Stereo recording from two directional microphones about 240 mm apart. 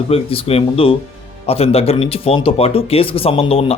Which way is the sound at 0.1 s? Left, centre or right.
Left.